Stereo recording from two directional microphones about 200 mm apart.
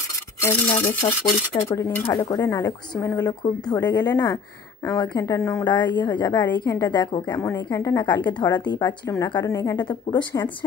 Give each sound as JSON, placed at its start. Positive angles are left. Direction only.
{"t": 0.8, "sound": "a woman's voice", "side_deg": 25}
{"t": 1.7, "sound": "a woman's voice", "side_deg": 10}